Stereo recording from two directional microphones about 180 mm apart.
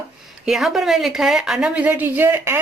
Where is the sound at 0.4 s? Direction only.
Centre (ahead or behind).